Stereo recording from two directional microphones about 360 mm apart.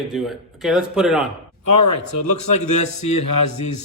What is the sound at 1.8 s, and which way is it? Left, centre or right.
Speech, left.